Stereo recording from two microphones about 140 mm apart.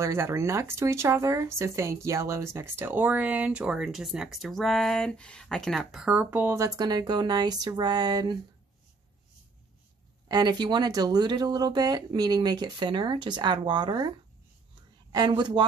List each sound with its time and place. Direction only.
0.0 s speech: 20° right (ahead or behind)
6.8 s speech: 30° right (ahead or behind)
10.2 s speech: 30° right (ahead or behind)
15.1 s speech: 30° right (ahead or behind)